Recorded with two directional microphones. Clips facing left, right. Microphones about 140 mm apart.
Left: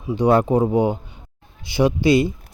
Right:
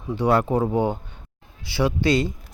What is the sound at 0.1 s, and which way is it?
Speech, 20° left (ahead or behind).